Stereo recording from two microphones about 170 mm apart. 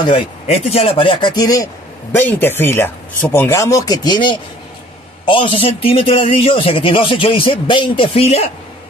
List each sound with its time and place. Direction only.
0.0 s a man's voice: 30° left (ahead or behind)